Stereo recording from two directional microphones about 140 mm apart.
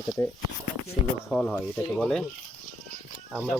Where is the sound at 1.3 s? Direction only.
5° left (ahead or behind).